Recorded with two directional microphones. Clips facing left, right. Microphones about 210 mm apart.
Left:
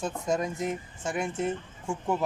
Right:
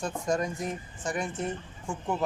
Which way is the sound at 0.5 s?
25° left (ahead or behind).